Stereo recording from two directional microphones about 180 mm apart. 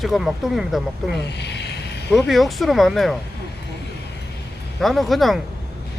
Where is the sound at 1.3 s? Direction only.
70° left (ahead or behind).